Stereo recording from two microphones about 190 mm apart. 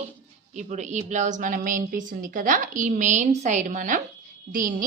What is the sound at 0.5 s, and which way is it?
A woman's voice, 35° right (ahead or behind).